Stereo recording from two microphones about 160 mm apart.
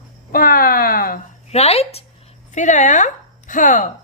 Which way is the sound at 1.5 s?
40° left (ahead or behind).